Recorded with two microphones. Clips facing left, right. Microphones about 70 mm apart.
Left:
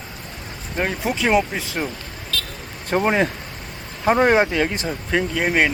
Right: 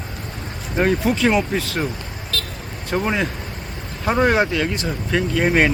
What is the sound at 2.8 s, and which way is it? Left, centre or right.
Speech, left.